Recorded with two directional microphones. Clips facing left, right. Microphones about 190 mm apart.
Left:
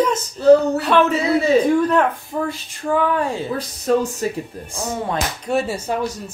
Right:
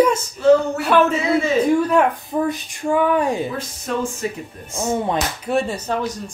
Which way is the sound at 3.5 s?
40° left (ahead or behind).